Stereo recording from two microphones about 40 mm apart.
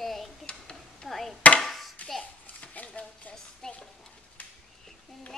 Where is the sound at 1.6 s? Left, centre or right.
Centre.